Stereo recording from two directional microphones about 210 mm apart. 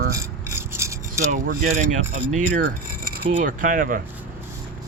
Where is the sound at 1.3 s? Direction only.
35° right (ahead or behind).